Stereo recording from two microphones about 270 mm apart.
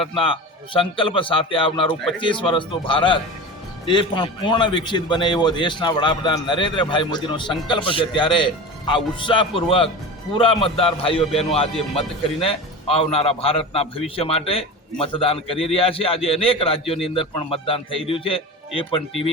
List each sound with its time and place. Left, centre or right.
0.0 s a man's voice: centre